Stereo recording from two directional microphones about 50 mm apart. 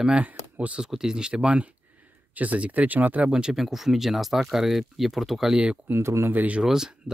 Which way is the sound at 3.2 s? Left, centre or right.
Centre.